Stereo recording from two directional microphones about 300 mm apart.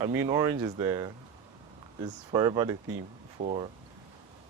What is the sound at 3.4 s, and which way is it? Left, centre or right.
Speech, right.